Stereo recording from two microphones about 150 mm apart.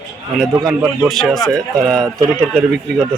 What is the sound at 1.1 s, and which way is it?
Speech, centre (ahead or behind).